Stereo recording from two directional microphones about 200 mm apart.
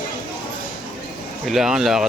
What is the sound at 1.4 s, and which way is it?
Speech, centre (ahead or behind).